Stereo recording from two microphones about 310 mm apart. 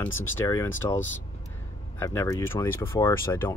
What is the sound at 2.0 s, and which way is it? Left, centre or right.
Speech, centre.